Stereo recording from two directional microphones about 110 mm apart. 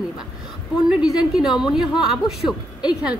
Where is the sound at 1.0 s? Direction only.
5° right (ahead or behind).